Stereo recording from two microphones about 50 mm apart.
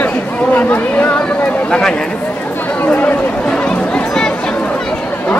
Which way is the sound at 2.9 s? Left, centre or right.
Left.